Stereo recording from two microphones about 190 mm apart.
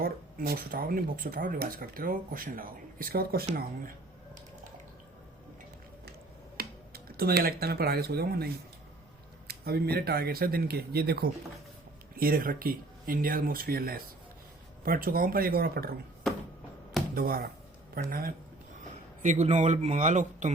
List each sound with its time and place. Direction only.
0.0 s speech: 50° right (ahead or behind)
6.6 s speech: 55° right (ahead or behind)
9.5 s speech: 55° right (ahead or behind)
17.2 s speech: 50° right (ahead or behind)
19.2 s a man's voice: 40° right (ahead or behind)